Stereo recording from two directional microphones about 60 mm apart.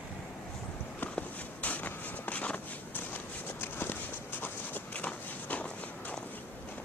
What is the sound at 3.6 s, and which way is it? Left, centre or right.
Walk, left.